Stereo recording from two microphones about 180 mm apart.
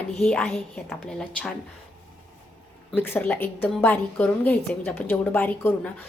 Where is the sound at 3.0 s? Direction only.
10° left (ahead or behind).